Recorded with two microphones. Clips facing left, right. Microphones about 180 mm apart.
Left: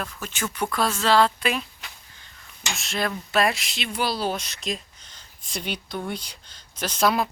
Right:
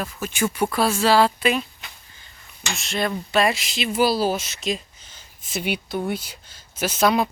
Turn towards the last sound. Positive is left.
turn(degrees=0)  # may be behind; listen again after turning